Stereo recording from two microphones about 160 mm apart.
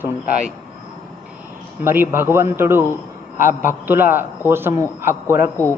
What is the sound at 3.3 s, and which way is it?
Speech, 55° left (ahead or behind).